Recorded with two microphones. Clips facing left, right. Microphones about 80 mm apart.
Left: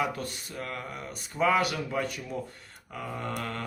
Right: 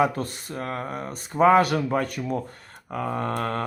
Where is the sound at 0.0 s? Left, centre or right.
Right.